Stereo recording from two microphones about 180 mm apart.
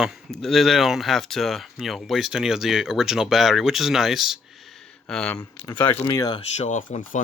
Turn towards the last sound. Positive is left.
turn(degrees=45)  # may be behind; listen again after turning